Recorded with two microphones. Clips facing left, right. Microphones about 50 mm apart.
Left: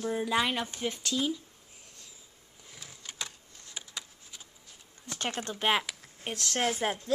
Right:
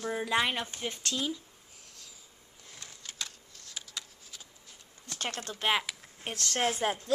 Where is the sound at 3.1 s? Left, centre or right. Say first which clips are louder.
Left 1 dB; centre.